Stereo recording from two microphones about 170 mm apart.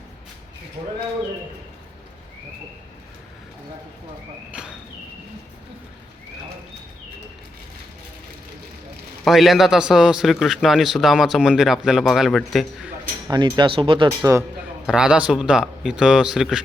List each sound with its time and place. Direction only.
4.5 s a sound: 5° right (ahead or behind)
9.2 s a man's voice: centre (ahead or behind)
13.2 s speech: 25° right (ahead or behind)
14.2 s a man's voice: 15° right (ahead or behind)
14.8 s a man's voice: 5° right (ahead or behind)